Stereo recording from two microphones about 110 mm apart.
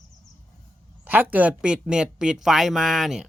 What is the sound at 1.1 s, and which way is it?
Speech, 15° right (ahead or behind).